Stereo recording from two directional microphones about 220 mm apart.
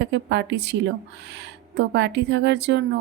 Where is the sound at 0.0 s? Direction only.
55° right (ahead or behind).